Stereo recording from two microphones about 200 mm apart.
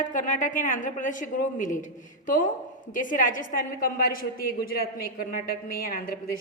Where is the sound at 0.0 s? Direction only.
40° left (ahead or behind).